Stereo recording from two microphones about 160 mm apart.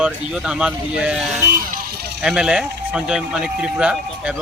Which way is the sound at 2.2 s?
5° right (ahead or behind).